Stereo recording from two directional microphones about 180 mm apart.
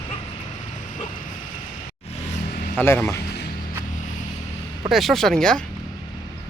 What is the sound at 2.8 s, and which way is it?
Speech, 10° left (ahead or behind).